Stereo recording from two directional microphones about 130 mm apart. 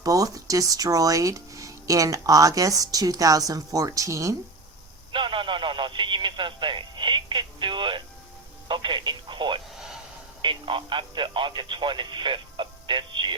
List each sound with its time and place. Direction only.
0.0 s speech: 25° right (ahead or behind)
5.1 s speech: 40° right (ahead or behind)
9.7 s a sound: 5° right (ahead or behind)
10.4 s speech: 40° right (ahead or behind)